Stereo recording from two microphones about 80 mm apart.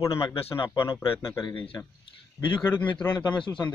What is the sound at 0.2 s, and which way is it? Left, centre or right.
Speech, left.